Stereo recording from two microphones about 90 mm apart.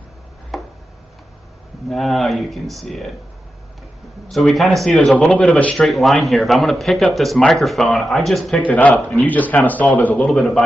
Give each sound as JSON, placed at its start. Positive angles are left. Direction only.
{"t": 0.5, "sound": "a sound", "side_deg": 0}
{"t": 1.9, "sound": "speech", "side_deg": 0}
{"t": 4.3, "sound": "speech", "side_deg": 0}
{"t": 5.1, "sound": "speech", "side_deg": 15}
{"t": 5.8, "sound": "speech", "side_deg": 0}
{"t": 8.6, "sound": "speech", "side_deg": 15}
{"t": 10.3, "sound": "speech", "side_deg": 5}